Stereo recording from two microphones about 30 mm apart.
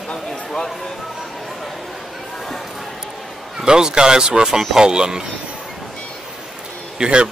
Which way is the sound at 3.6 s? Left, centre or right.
Right.